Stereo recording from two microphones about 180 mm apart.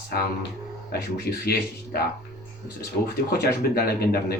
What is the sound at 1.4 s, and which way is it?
Speech, 60° left (ahead or behind).